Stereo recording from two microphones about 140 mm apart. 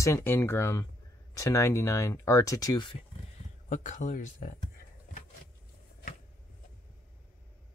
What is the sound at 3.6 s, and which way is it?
Speech, 60° left (ahead or behind).